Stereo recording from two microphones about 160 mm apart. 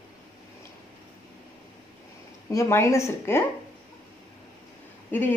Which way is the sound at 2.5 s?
15° left (ahead or behind).